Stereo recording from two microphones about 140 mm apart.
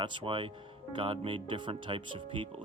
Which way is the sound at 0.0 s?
35° right (ahead or behind).